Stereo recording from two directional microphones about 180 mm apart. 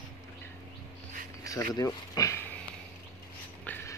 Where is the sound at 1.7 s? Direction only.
20° left (ahead or behind).